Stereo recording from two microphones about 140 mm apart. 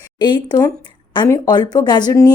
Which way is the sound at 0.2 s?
35° left (ahead or behind).